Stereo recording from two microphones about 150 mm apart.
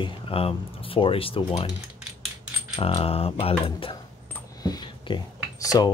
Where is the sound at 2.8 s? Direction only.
40° left (ahead or behind).